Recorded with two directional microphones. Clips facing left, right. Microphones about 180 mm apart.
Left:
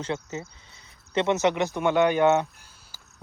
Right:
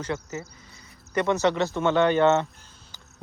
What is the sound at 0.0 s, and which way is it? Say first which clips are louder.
Speech: even; 20° left (ahead or behind).